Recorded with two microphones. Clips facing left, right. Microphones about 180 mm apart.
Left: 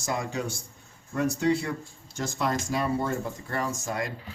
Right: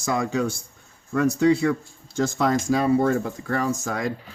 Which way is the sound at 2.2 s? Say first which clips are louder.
Right 7 dB; 90° right.